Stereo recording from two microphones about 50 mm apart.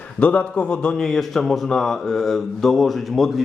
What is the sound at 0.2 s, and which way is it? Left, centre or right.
Speech, left.